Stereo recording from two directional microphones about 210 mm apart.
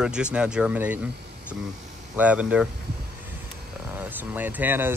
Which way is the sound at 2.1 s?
5° right (ahead or behind).